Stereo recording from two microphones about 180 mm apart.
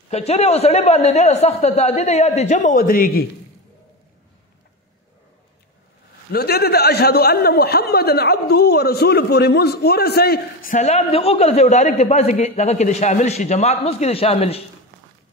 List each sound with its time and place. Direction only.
0.1 s a man's voice: 35° left (ahead or behind); by 3.3 s 50° left (ahead or behind)
6.3 s a man's voice: 60° left (ahead or behind); by 14.6 s 35° left (ahead or behind)